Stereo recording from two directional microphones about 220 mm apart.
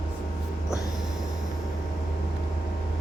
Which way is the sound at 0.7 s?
15° left (ahead or behind).